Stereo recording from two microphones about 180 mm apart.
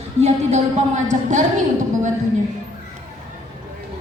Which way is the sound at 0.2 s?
40° right (ahead or behind).